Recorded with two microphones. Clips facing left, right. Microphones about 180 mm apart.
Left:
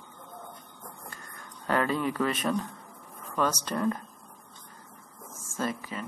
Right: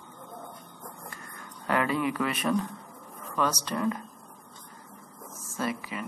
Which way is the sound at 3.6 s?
40° left (ahead or behind).